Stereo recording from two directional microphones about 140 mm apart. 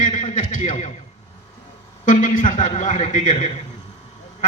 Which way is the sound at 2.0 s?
70° left (ahead or behind).